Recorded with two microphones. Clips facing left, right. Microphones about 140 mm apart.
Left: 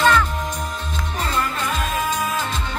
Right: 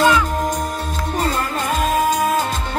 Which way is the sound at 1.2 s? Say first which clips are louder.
Right 2 dB; 40° right (ahead or behind).